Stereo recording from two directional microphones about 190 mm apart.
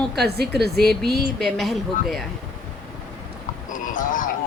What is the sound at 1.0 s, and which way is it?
A woman's voice, centre (ahead or behind).